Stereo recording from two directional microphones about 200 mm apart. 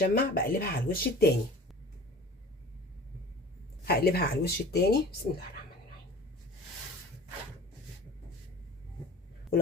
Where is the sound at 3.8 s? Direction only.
50° left (ahead or behind).